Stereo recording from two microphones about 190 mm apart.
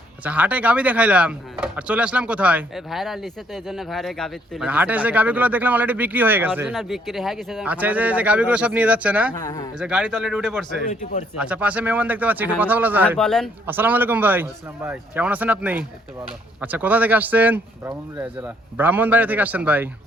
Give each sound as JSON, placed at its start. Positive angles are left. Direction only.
{"t": 0.3, "sound": "speech", "side_deg": -10}
{"t": 9.3, "sound": "speech", "side_deg": 20}
{"t": 9.7, "sound": "speech", "side_deg": -5}
{"t": 10.8, "sound": "speech", "side_deg": 40}
{"t": 11.3, "sound": "speech", "side_deg": -5}
{"t": 13.1, "sound": "speech", "side_deg": 5}
{"t": 13.7, "sound": "speech", "side_deg": -10}